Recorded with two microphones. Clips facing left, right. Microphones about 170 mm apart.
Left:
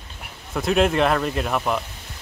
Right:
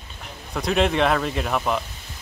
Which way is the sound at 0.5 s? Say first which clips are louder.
Left 2 dB; centre (ahead or behind).